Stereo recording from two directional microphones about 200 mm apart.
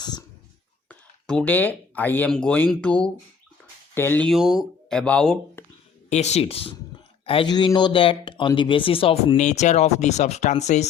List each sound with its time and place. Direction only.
0.0 s a sound: 20° left (ahead or behind)
0.9 s speech: 5° left (ahead or behind)
6.1 s speech: 35° left (ahead or behind)